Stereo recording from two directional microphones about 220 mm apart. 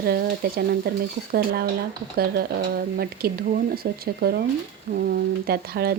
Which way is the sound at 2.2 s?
45° right (ahead or behind).